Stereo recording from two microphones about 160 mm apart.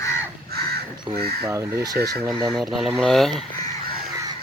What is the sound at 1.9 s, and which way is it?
Speech, 90° right.